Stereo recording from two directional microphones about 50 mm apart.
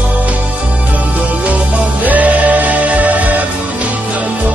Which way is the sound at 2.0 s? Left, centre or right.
Right.